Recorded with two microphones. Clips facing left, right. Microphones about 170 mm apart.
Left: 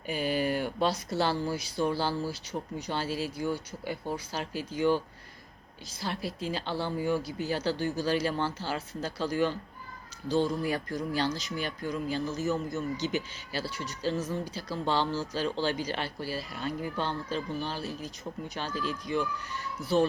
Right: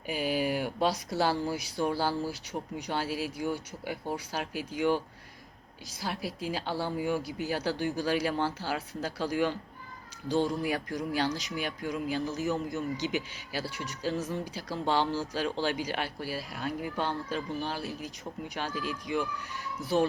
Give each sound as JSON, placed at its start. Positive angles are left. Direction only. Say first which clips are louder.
{"t": 0.1, "sound": "speech", "louder": "left 1 dB", "side_deg": -10}
{"t": 6.0, "sound": "speech", "louder": "left 1 dB", "side_deg": -10}